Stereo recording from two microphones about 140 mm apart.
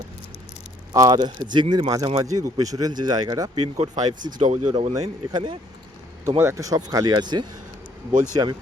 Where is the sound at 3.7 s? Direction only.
55° right (ahead or behind).